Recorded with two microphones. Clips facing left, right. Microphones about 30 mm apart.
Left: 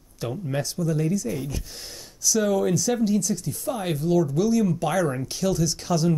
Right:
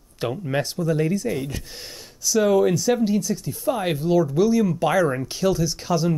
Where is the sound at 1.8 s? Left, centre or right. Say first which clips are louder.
Even; centre.